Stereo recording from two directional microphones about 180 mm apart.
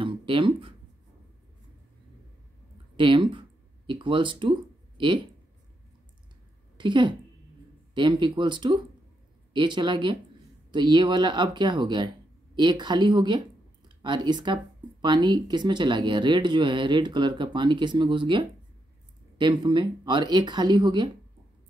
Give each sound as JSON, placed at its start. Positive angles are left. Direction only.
{"t": 0.0, "sound": "a sound", "side_deg": -30}
{"t": 3.0, "sound": "speech", "side_deg": -25}
{"t": 6.8, "sound": "a woman's voice", "side_deg": -25}